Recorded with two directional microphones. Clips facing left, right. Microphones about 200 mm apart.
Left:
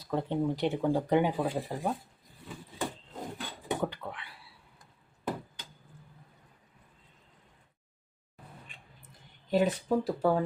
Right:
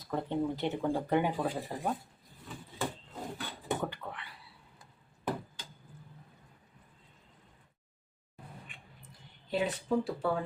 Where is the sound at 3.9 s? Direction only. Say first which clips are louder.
Left 2 dB; 15° left (ahead or behind).